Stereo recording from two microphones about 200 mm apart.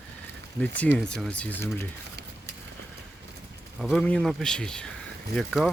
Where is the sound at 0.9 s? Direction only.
5° left (ahead or behind).